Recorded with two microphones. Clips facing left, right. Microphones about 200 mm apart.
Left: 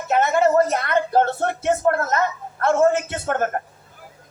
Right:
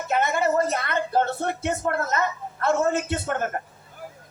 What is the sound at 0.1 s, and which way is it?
Speech, 50° left (ahead or behind).